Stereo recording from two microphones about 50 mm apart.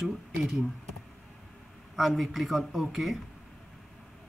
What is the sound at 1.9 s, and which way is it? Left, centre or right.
Speech, centre.